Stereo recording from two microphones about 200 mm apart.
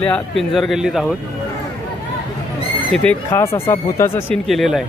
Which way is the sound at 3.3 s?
15° left (ahead or behind).